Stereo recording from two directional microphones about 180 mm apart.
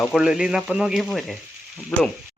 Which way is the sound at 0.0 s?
5° right (ahead or behind).